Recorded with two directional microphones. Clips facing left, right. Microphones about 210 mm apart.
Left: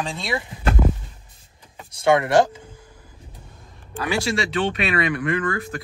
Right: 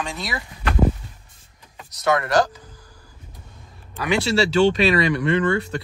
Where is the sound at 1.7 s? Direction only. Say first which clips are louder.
Left 3 dB; 25° left (ahead or behind).